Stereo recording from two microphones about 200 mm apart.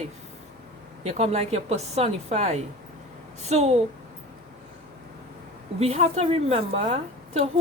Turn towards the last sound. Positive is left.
turn(degrees=-30)  # may be behind; listen again after turning